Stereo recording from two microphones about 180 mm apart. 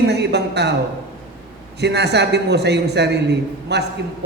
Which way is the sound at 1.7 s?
70° right (ahead or behind).